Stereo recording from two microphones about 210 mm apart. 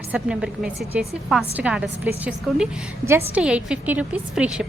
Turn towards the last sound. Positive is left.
turn(degrees=-5)  # may be behind; listen again after turning